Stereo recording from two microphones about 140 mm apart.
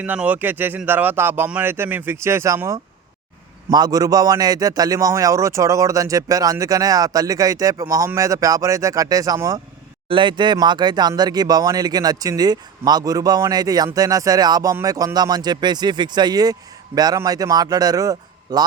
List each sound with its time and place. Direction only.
0.0 s speech: 10° right (ahead or behind)